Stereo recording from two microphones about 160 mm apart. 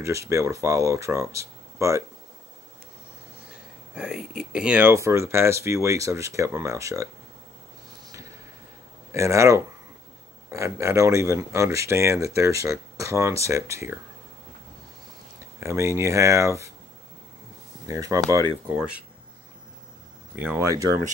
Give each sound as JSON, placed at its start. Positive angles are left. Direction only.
{"t": 0.0, "sound": "speech", "side_deg": -20}
{"t": 3.9, "sound": "speech", "side_deg": -5}
{"t": 9.1, "sound": "speech", "side_deg": -20}
{"t": 15.6, "sound": "speech", "side_deg": -15}
{"t": 17.8, "sound": "speech", "side_deg": -20}
{"t": 20.3, "sound": "speech", "side_deg": -15}